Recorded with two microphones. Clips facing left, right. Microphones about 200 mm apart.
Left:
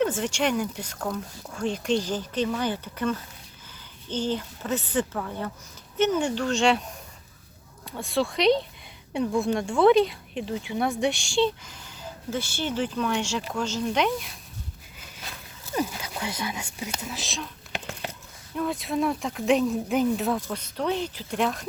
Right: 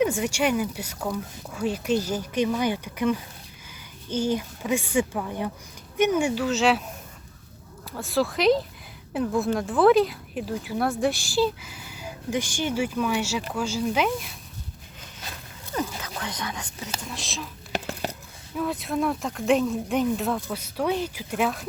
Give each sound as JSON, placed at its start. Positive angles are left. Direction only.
{"t": 0.0, "sound": "speech", "side_deg": -10}
{"t": 7.9, "sound": "speech", "side_deg": 0}
{"t": 15.7, "sound": "speech", "side_deg": 10}
{"t": 17.7, "sound": "a sound", "side_deg": -40}
{"t": 18.5, "sound": "speech", "side_deg": 0}